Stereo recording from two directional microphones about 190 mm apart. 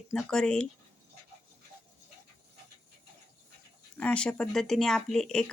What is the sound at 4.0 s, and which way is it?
Speech, 5° left (ahead or behind).